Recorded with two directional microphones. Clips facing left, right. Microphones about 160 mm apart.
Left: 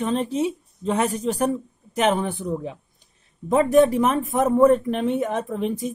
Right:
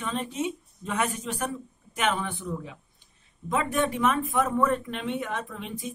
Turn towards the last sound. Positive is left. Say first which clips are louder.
# left 11 dB
turn(degrees=40)  # may be behind; listen again after turning